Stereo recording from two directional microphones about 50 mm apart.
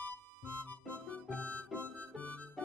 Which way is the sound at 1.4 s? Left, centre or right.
Left.